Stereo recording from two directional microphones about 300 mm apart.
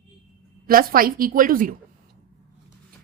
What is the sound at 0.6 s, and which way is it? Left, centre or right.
A woman's voice, right.